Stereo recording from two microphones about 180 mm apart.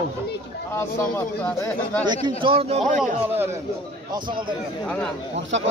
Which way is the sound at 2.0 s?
25° right (ahead or behind).